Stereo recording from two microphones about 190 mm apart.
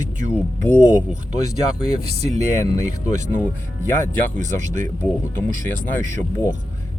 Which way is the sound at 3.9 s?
40° right (ahead or behind).